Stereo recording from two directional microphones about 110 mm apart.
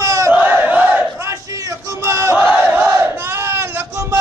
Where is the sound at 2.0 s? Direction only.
25° right (ahead or behind).